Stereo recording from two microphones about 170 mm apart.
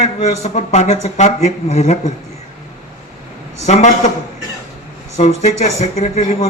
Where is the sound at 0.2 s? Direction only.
40° left (ahead or behind).